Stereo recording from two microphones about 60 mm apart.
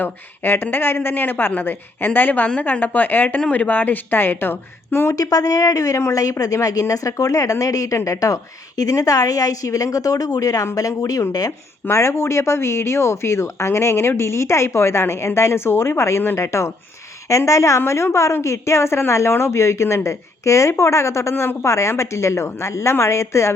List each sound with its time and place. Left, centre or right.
0.0 s a woman's voice: left
5.1 s a woman's voice: left
11.9 s a woman's voice: left